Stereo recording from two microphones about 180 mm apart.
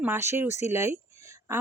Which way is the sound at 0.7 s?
15° right (ahead or behind).